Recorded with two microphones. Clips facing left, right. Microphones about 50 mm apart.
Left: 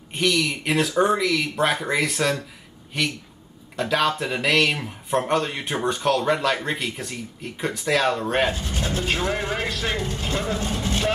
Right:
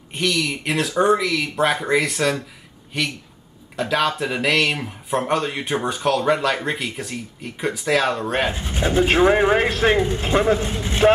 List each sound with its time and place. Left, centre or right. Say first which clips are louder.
0.1 s speech: even; centre
8.5 s speech: right 3 dB; right